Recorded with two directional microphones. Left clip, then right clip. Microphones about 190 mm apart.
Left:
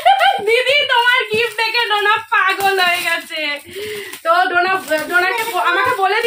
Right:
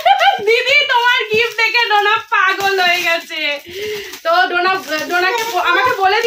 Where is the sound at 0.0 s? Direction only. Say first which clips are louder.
Right 1 dB; 5° right (ahead or behind).